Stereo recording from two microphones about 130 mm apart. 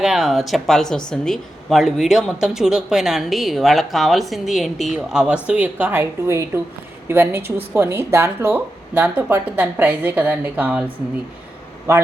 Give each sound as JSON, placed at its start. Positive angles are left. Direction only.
{"t": 0.0, "sound": "speech", "side_deg": -5}